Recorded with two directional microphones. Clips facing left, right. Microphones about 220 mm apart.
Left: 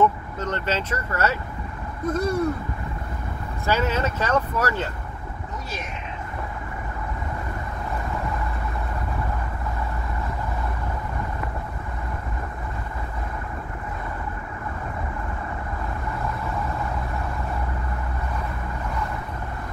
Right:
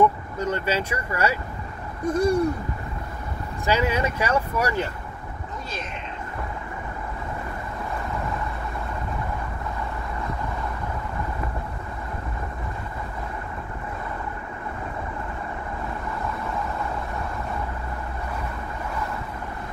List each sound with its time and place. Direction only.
0.0 s speech: 10° right (ahead or behind)
3.6 s speech: 15° right (ahead or behind)